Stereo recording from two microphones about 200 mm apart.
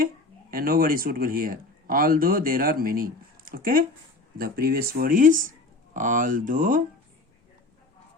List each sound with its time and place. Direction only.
0.5 s speech: 45° right (ahead or behind)